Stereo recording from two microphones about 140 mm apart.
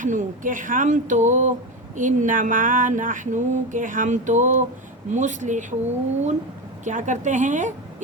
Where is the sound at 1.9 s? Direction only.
65° right (ahead or behind).